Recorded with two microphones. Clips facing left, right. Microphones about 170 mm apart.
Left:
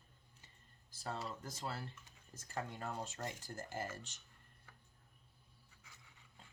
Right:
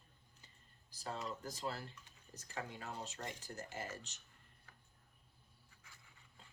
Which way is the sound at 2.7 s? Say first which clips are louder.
Left 3 dB; 50° left (ahead or behind).